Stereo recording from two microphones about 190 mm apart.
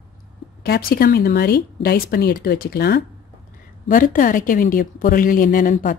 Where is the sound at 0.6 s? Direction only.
55° left (ahead or behind).